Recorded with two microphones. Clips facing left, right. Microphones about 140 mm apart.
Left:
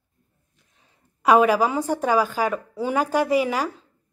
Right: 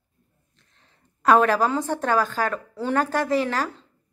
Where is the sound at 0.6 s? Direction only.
10° left (ahead or behind).